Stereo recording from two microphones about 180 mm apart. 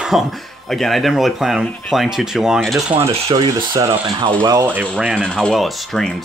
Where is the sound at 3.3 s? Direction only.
20° right (ahead or behind).